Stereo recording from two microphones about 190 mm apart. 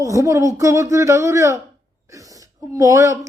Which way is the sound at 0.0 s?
15° right (ahead or behind).